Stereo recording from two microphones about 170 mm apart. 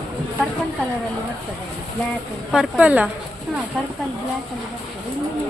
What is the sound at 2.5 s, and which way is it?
Speech, 10° right (ahead or behind).